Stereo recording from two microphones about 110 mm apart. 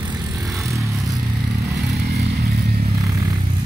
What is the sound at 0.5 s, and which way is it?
Vehicle, 30° right (ahead or behind).